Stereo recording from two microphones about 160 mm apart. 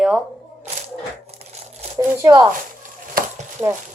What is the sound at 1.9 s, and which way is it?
Speech, 20° right (ahead or behind).